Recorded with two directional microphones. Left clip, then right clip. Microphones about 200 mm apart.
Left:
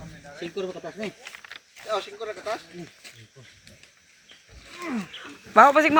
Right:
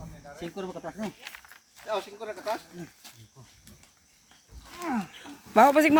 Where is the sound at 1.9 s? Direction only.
40° right (ahead or behind).